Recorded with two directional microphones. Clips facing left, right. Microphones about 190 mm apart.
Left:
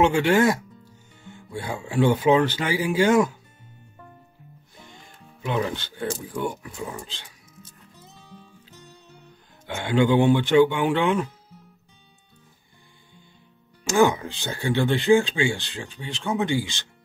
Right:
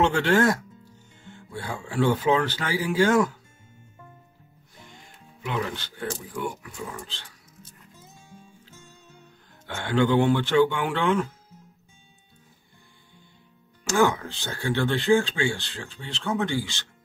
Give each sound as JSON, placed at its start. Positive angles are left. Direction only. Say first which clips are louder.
{"t": 0.0, "sound": "speech", "louder": "left 2 dB", "side_deg": 10}
{"t": 5.4, "sound": "speech", "louder": "left 4 dB", "side_deg": 25}
{"t": 7.1, "sound": "speech", "louder": "left 1 dB", "side_deg": 15}
{"t": 9.7, "sound": "speech", "louder": "left 2 dB", "side_deg": 15}
{"t": 13.8, "sound": "speech", "louder": "left 3 dB", "side_deg": 15}